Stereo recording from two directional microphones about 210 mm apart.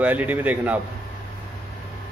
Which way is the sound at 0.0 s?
5° right (ahead or behind).